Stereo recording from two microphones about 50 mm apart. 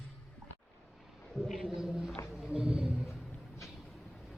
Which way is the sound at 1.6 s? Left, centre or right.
Centre.